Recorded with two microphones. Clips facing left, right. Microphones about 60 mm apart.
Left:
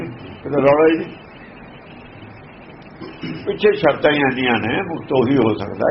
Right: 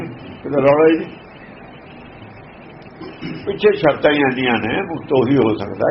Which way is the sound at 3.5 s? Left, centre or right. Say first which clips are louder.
Right 1 dB; centre.